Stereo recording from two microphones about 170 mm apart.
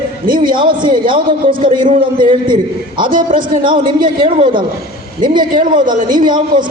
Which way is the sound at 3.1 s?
55° right (ahead or behind).